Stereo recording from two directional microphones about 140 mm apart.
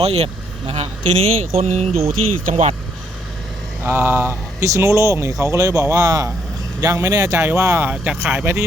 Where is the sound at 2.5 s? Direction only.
65° right (ahead or behind).